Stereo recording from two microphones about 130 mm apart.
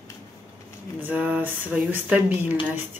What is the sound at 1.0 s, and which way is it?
Speech, 15° right (ahead or behind).